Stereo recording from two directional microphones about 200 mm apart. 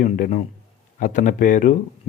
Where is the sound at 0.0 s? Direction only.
40° left (ahead or behind).